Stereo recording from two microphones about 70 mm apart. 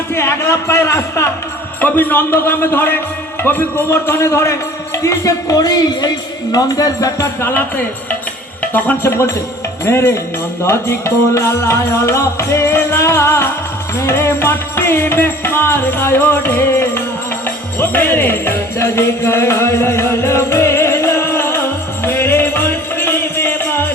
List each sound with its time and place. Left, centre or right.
0.1 s speech: left
1.8 s music: left
3.4 s a man's voice: left
3.8 s music: left
5.0 s music: left
8.6 s speech: left
9.0 s music: left
17.7 s jingle bell: left
22.0 s music: left